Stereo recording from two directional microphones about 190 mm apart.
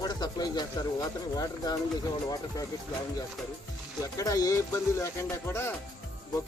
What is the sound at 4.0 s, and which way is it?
Speech, 15° left (ahead or behind).